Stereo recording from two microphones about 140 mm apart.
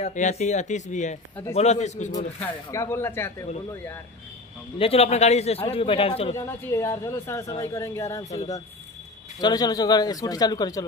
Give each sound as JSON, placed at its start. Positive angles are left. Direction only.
{"t": 0.0, "sound": "speech", "side_deg": 60}
{"t": 2.4, "sound": "speech", "side_deg": 20}
{"t": 4.7, "sound": "a man's voice", "side_deg": 45}
{"t": 6.3, "sound": "speech", "side_deg": 20}
{"t": 9.4, "sound": "speech", "side_deg": 25}